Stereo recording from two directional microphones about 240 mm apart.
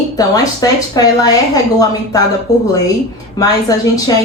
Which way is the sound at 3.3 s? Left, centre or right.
Centre.